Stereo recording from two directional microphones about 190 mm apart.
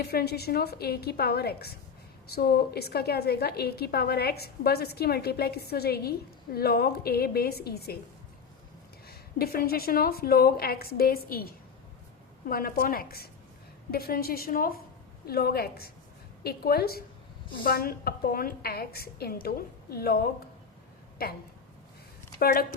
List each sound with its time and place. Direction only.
0.0 s a woman's voice: 55° left (ahead or behind)
9.0 s a woman's voice: 55° left (ahead or behind)
21.2 s a woman's voice: 55° left (ahead or behind)
22.4 s speech: 50° left (ahead or behind)